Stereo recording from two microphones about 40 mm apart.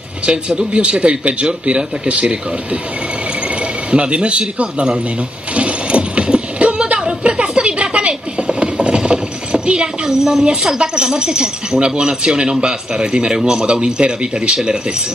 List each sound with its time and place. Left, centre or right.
0.3 s speech: right
3.9 s speech: right
5.5 s a sound: right
7.0 s music: right
10.0 s speech: centre